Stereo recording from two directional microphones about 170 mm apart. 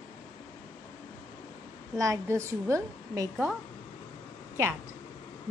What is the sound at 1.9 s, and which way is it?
A woman's voice, 20° right (ahead or behind).